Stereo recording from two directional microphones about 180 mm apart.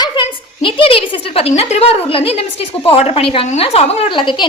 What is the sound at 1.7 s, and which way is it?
A woman's voice, 35° left (ahead or behind).